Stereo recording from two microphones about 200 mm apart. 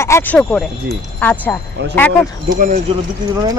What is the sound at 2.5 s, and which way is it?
Speech, 40° right (ahead or behind).